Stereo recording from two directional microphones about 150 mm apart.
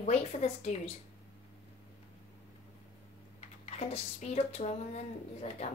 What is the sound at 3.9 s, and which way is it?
Speech, 45° left (ahead or behind).